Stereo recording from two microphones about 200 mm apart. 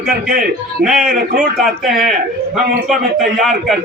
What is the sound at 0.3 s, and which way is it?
Speech, 45° right (ahead or behind).